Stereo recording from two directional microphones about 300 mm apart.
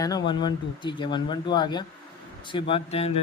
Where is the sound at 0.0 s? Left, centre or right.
Centre.